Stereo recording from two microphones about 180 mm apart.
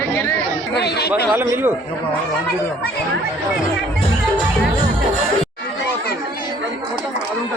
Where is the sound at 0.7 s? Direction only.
65° left (ahead or behind).